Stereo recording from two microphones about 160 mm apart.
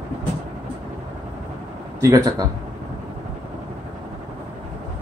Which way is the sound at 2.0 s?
25° right (ahead or behind).